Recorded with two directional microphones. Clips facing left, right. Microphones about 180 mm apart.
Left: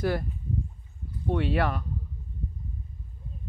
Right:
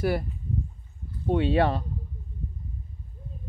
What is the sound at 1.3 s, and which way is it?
Speech, 25° right (ahead or behind).